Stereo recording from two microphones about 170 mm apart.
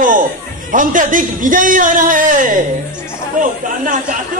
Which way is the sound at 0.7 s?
50° right (ahead or behind).